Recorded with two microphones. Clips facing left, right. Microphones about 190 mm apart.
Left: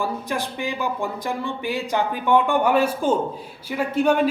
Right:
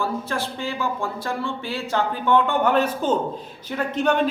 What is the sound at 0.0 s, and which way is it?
A man's voice, 15° left (ahead or behind).